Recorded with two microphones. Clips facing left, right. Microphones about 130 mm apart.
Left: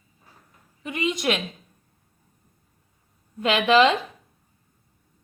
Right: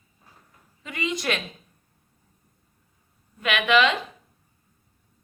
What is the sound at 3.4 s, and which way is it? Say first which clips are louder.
Speech: left 3 dB; 30° left (ahead or behind).